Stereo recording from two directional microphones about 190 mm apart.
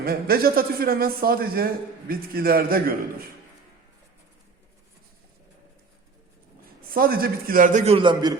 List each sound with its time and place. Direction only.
0.0 s a man's voice: 50° right (ahead or behind)
6.9 s a man's voice: 50° right (ahead or behind); by 8.4 s 25° right (ahead or behind)